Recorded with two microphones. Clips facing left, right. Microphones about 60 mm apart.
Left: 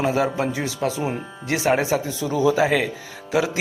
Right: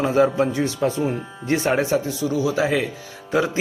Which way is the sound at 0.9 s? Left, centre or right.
Left.